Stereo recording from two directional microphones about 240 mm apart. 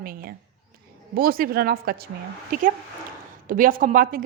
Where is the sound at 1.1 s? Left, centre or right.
Right.